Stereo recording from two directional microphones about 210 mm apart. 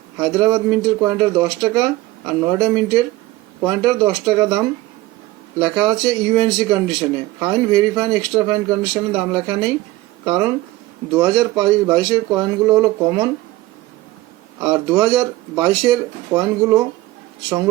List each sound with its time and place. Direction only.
0.2 s speech: 20° right (ahead or behind)
14.6 s speech: 15° right (ahead or behind)